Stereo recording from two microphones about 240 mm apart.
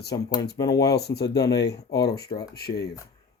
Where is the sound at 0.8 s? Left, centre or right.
Left.